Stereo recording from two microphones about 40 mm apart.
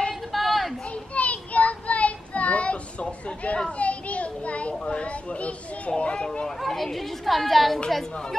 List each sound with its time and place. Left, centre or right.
0.1 s a sound: centre
0.9 s child singing: left
4.7 s children playing: left
6.6 s a child's voice: centre